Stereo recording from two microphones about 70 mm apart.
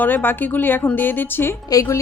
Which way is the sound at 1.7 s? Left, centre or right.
Left.